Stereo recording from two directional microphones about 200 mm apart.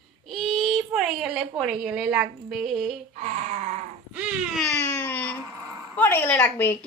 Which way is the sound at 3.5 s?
35° right (ahead or behind).